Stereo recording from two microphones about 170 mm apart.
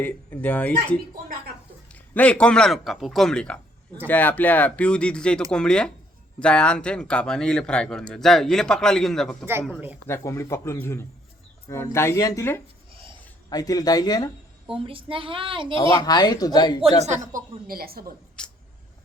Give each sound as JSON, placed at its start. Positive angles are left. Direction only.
{"t": 0.0, "sound": "speech", "side_deg": 10}
{"t": 1.9, "sound": "speech", "side_deg": 5}
{"t": 9.5, "sound": "speech", "side_deg": -15}
{"t": 10.1, "sound": "speech", "side_deg": 15}
{"t": 12.9, "sound": "a sound", "side_deg": -30}
{"t": 13.5, "sound": "speech", "side_deg": 20}
{"t": 14.8, "sound": "speech", "side_deg": -30}
{"t": 16.0, "sound": "speech", "side_deg": 25}
{"t": 17.7, "sound": "a woman's voice", "side_deg": -60}
{"t": 18.4, "sound": "a sound", "side_deg": 5}